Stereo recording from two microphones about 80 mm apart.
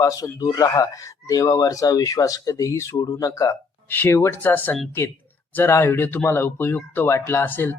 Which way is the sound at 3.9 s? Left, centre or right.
Left.